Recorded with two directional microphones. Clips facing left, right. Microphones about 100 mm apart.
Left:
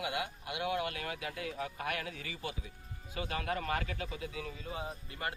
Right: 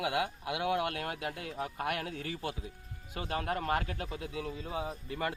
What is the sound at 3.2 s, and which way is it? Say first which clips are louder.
Speech: right 2 dB; 35° right (ahead or behind).